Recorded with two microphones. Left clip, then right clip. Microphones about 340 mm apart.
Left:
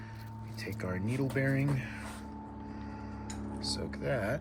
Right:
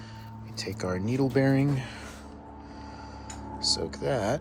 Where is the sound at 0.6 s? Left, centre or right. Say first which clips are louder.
Right 7 dB; centre.